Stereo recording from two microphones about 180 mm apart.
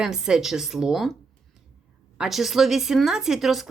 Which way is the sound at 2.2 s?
Centre (ahead or behind).